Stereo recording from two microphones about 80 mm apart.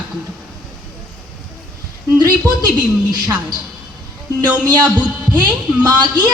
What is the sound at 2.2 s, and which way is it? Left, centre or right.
Speech, right.